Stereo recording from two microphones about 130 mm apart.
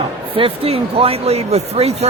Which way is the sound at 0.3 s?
45° right (ahead or behind).